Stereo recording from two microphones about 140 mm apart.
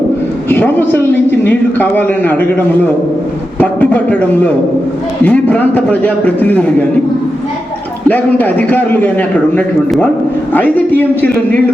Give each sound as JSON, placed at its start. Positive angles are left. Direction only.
{"t": 0.4, "sound": "a man's voice", "side_deg": 15}
{"t": 8.0, "sound": "a man's voice", "side_deg": 10}